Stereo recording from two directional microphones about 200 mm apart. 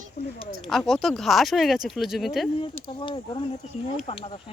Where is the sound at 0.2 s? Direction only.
50° left (ahead or behind).